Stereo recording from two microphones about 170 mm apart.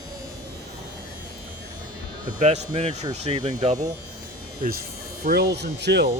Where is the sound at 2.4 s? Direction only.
40° right (ahead or behind).